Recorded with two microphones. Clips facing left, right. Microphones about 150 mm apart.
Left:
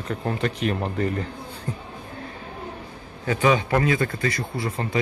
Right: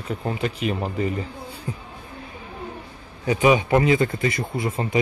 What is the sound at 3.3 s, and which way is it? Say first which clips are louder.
Speech: right 3 dB; 15° right (ahead or behind).